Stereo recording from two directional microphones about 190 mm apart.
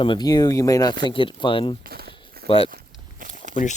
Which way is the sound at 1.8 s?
55° right (ahead or behind).